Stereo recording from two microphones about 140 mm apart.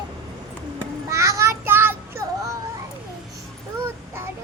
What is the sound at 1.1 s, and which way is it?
Child singing, 20° right (ahead or behind).